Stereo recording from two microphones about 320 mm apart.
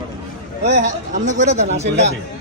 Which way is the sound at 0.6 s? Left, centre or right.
Right.